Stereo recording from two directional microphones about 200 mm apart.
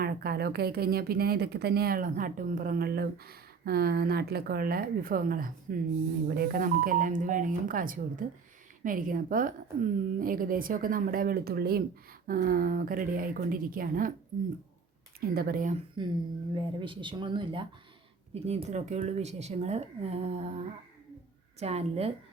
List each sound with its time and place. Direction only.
0.0 s speech: 50° right (ahead or behind)
15.2 s speech: 50° right (ahead or behind)
16.0 s speech: 20° right (ahead or behind)
21.6 s speech: 30° right (ahead or behind)